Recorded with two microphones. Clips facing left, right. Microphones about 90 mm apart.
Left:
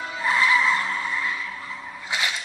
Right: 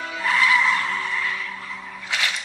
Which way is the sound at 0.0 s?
20° left (ahead or behind).